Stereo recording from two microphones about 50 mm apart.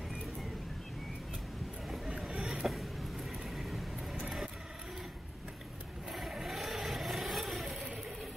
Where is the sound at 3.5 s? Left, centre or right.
Centre.